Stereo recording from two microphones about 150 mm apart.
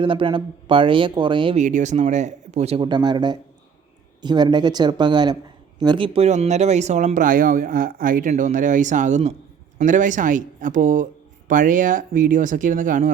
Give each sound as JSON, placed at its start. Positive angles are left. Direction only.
{"t": 0.0, "sound": "speech", "side_deg": -35}
{"t": 1.5, "sound": "speech", "side_deg": -55}
{"t": 2.8, "sound": "speech", "side_deg": -30}
{"t": 6.1, "sound": "speech", "side_deg": -45}
{"t": 8.3, "sound": "speech", "side_deg": -55}